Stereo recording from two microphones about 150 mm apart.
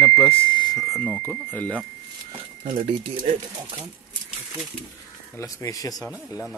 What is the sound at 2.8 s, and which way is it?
Speech, 40° right (ahead or behind).